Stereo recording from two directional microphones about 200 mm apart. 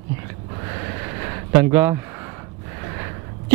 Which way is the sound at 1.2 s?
15° right (ahead or behind).